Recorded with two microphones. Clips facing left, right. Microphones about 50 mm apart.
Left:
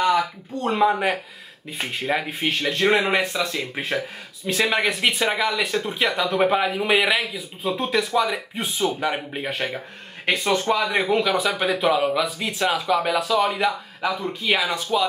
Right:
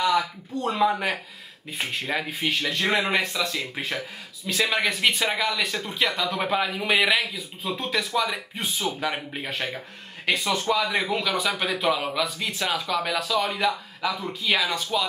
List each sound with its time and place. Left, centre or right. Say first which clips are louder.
0.1 s a sound: left 2 dB; left
0.8 s speech: left 3 dB; centre
9.5 s speech: left 3 dB; centre
10.9 s speech: left 5 dB; centre